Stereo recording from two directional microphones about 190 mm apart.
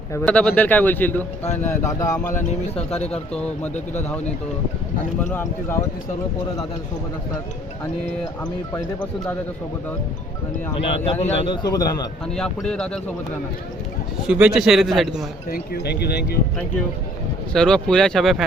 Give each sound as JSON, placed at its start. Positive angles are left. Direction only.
{"t": 0.1, "sound": "a man's voice", "side_deg": 10}
{"t": 2.5, "sound": "speech", "side_deg": 35}
{"t": 3.3, "sound": "a man's voice", "side_deg": 5}
{"t": 5.3, "sound": "a man's voice", "side_deg": 15}
{"t": 8.7, "sound": "a man's voice", "side_deg": 5}
{"t": 11.2, "sound": "a man's voice", "side_deg": 30}
{"t": 12.3, "sound": "a man's voice", "side_deg": 5}
{"t": 14.3, "sound": "a man's voice", "side_deg": -5}
{"t": 15.4, "sound": "speech", "side_deg": 55}
{"t": 17.5, "sound": "a man's voice", "side_deg": 5}